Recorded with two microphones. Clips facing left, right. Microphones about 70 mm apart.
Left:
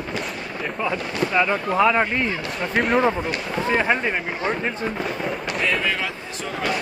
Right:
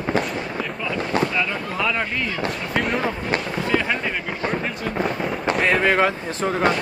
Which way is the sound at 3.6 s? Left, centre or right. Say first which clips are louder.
Left 3 dB; left.